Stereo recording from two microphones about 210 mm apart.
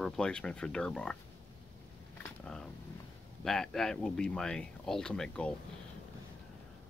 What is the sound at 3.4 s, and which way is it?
Speech, centre (ahead or behind).